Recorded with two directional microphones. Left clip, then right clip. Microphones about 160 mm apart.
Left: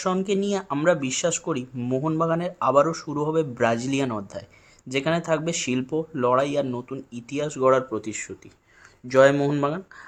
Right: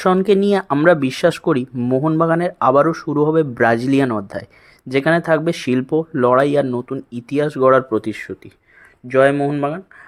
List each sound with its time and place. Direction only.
0.0 s speech: 45° right (ahead or behind)
9.0 s speech: 15° right (ahead or behind)
9.3 s speech: 5° right (ahead or behind)